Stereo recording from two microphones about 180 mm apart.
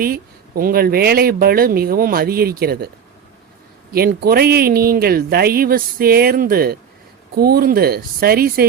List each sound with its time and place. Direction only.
0.0 s speech: 55° right (ahead or behind)
3.9 s speech: 60° right (ahead or behind)